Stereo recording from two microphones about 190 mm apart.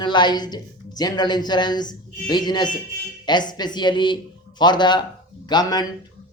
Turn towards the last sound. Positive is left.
turn(degrees=20)  # may be behind; listen again after turning